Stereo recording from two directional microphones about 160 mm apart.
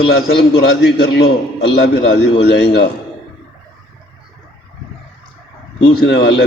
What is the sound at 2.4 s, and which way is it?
Speech, 90° left.